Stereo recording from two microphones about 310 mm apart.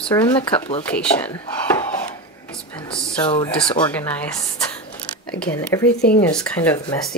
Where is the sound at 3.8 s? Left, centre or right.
Centre.